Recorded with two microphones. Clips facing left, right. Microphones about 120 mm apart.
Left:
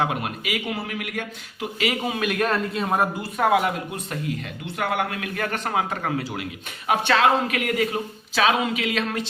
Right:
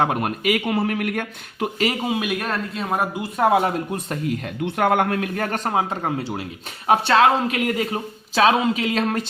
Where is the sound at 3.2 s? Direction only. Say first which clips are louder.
Right 5 dB; 30° right (ahead or behind).